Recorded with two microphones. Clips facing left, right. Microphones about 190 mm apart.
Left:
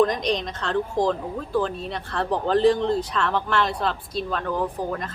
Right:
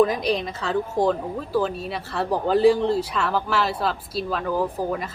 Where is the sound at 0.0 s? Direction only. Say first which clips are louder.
Right 1 dB; 5° right (ahead or behind).